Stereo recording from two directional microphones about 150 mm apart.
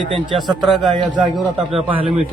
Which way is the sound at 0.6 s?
Centre (ahead or behind).